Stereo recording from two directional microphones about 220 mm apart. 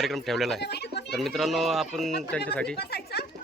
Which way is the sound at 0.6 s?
50° left (ahead or behind).